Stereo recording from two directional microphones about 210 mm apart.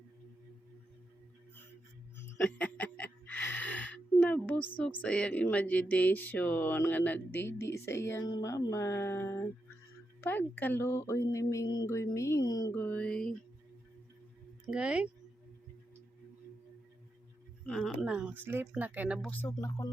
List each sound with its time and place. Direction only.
2.1 s music: 5° left (ahead or behind)
4.8 s speech: 5° left (ahead or behind)
14.7 s speech: 5° right (ahead or behind)
17.7 s speech: centre (ahead or behind)
19.3 s speech: 10° left (ahead or behind)